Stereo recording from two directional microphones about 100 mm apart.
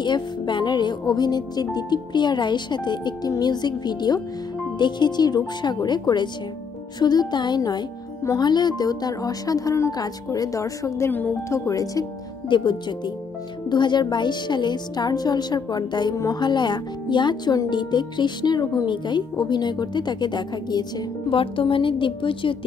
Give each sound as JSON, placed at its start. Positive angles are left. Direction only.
{"t": 0.0, "sound": "a woman's voice", "side_deg": 50}
{"t": 11.1, "sound": "speech", "side_deg": 20}
{"t": 11.4, "sound": "a woman's voice", "side_deg": 30}
{"t": 12.4, "sound": "speech", "side_deg": 50}
{"t": 21.3, "sound": "a woman's voice", "side_deg": 60}